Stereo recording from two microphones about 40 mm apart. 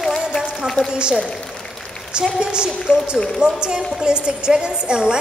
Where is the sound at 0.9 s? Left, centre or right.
Right.